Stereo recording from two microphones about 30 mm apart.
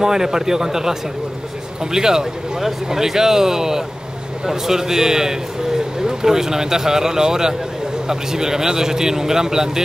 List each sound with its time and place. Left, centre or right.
0.0 s a man's voice: centre